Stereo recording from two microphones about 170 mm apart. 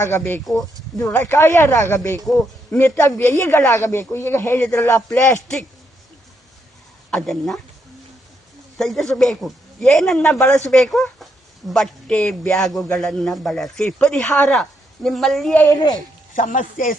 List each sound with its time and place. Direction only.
0.0 s speech: 15° left (ahead or behind)
7.1 s a man's voice: centre (ahead or behind)
8.8 s a man's voice: centre (ahead or behind)
15.6 s speech: 25° left (ahead or behind)
16.3 s speech: 50° left (ahead or behind)